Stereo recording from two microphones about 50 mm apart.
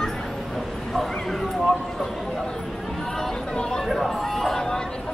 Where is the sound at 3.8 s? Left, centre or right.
Centre.